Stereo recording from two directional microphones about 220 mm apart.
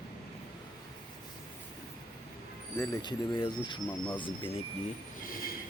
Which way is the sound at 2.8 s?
20° left (ahead or behind).